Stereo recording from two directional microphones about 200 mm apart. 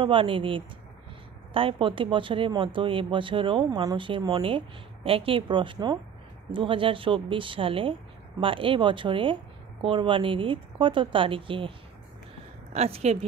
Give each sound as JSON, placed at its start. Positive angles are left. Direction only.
{"t": 0.0, "sound": "speech", "side_deg": -25}
{"t": 12.7, "sound": "speech", "side_deg": -30}